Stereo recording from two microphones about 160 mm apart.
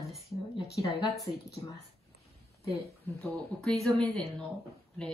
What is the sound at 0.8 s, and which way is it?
Speech, 30° left (ahead or behind).